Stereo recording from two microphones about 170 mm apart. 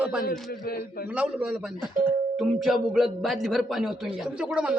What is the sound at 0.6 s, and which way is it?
Speech, 60° left (ahead or behind).